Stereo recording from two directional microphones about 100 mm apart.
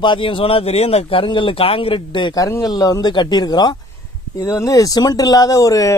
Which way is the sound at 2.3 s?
35° left (ahead or behind).